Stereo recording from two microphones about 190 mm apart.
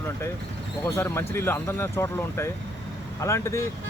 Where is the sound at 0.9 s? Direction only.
15° left (ahead or behind).